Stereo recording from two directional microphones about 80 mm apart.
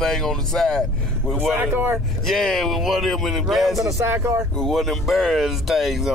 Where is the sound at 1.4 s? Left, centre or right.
Centre.